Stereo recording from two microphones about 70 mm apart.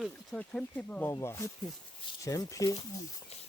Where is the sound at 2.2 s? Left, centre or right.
Left.